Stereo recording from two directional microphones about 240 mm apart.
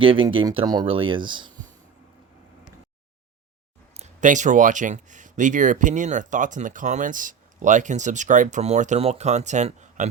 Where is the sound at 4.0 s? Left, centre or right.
Right.